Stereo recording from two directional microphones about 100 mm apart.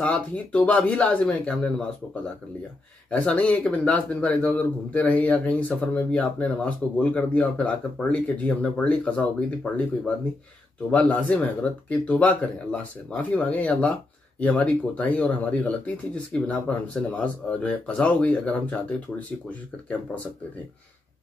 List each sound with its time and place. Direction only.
0.0 s speech: 15° left (ahead or behind)
3.1 s speech: 10° left (ahead or behind)